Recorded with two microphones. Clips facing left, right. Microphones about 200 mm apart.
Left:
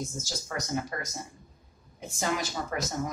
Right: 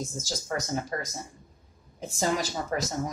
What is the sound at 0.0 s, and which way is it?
Speech, 30° right (ahead or behind).